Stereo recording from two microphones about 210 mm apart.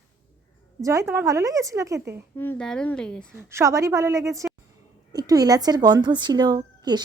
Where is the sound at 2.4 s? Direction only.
5° left (ahead or behind).